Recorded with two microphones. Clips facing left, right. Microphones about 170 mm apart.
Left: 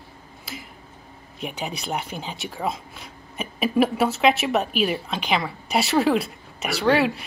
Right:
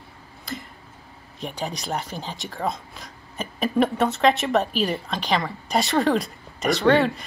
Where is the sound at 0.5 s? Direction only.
5° left (ahead or behind).